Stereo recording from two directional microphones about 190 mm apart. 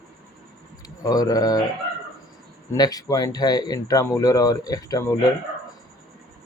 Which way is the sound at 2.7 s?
20° left (ahead or behind).